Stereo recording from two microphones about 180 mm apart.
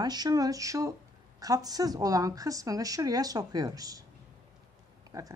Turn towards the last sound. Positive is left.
turn(degrees=-20)  # may be behind; listen again after turning